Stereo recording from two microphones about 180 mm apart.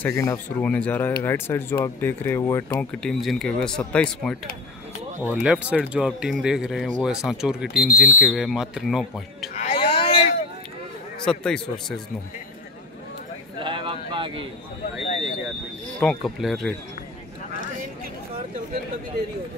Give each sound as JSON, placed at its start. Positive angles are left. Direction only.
{"t": 0.0, "sound": "speech", "side_deg": 15}
{"t": 2.8, "sound": "speech", "side_deg": 5}
{"t": 5.3, "sound": "speech", "side_deg": -5}
{"t": 9.6, "sound": "a sound", "side_deg": 30}
{"t": 11.2, "sound": "speech", "side_deg": 5}
{"t": 13.6, "sound": "a sound", "side_deg": -25}
{"t": 16.0, "sound": "speech", "side_deg": 0}